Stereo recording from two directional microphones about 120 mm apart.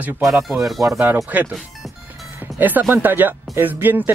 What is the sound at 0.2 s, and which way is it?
Speech, centre (ahead or behind).